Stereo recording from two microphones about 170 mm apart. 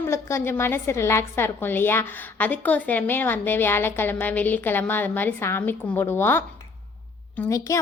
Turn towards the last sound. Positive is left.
turn(degrees=20)  # may be behind; listen again after turning